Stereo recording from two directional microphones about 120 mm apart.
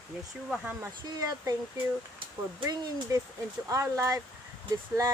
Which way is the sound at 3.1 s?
25° right (ahead or behind).